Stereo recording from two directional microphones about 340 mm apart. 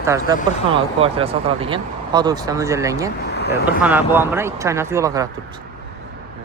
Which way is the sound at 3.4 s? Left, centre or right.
Left.